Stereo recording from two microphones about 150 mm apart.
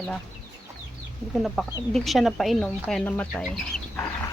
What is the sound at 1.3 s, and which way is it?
Speech, centre (ahead or behind).